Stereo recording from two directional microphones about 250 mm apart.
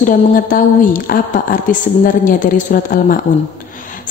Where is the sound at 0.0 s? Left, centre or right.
Left.